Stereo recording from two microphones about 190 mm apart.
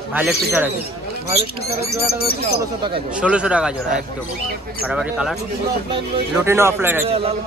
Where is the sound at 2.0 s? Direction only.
55° left (ahead or behind).